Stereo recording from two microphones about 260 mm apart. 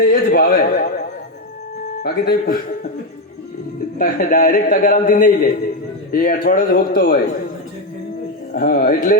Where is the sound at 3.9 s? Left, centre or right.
Left.